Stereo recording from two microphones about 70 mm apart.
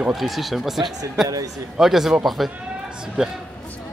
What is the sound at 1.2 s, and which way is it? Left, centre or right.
Speech, right.